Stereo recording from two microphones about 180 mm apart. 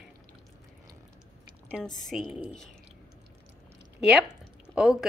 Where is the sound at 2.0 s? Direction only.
Centre (ahead or behind).